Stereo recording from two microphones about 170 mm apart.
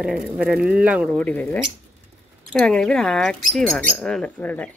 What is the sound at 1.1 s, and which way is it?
Speech, 10° left (ahead or behind).